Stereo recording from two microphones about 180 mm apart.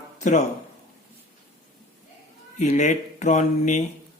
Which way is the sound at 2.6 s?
45° left (ahead or behind).